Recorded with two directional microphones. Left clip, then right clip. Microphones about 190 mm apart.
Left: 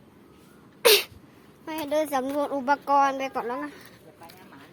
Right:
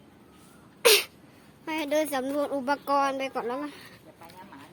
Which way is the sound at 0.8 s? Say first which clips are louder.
Left 1 dB; 10° left (ahead or behind).